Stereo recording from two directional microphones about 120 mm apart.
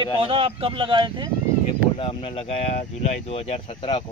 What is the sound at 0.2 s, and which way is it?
Speech, 50° right (ahead or behind).